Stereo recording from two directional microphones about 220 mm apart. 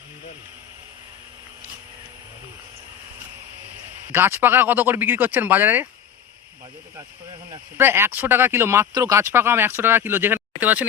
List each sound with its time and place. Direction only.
4.1 s speech: 10° right (ahead or behind)
7.5 s speech: 10° right (ahead or behind)